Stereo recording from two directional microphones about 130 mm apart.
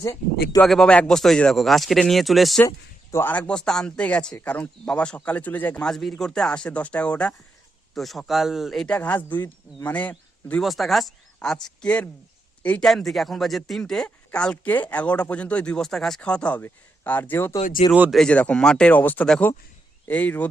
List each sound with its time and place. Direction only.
0.0 s speech: 25° left (ahead or behind)
0.6 s speech: 5° left (ahead or behind)
2.6 s speech: 20° left (ahead or behind); by 9.0 s centre (ahead or behind)
9.0 s speech: 15° left (ahead or behind)
10.6 s speech: centre (ahead or behind); by 17.6 s 15° left (ahead or behind)
18.1 s speech: 5° left (ahead or behind)